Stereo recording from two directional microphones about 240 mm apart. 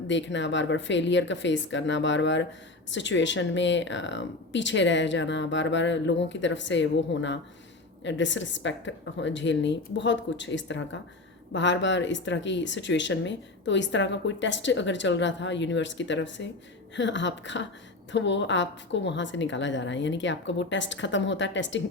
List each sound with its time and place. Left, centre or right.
0.1 s speech: left